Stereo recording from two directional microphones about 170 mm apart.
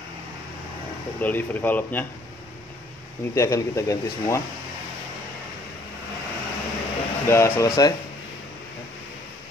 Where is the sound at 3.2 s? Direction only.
15° left (ahead or behind).